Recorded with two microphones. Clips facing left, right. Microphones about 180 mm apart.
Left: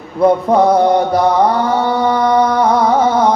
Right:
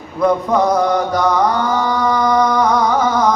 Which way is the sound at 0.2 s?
30° left (ahead or behind).